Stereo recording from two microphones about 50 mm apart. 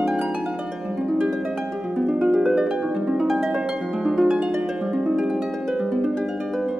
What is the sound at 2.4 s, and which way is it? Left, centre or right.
Harp, centre.